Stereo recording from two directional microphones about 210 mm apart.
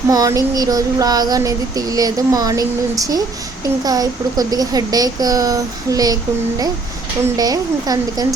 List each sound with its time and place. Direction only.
0.1 s child singing: 15° right (ahead or behind)
7.3 s child singing: 20° right (ahead or behind)